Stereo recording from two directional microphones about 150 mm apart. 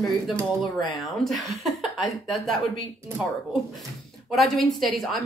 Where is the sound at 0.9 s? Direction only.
Centre (ahead or behind).